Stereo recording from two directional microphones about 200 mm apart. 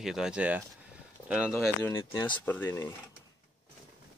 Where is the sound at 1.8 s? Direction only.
10° left (ahead or behind).